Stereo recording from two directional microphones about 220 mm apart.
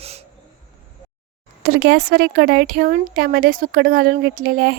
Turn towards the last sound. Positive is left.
turn(degrees=-40)  # may be behind; listen again after turning